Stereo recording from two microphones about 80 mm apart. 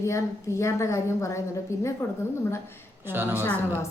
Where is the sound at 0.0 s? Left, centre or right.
Left.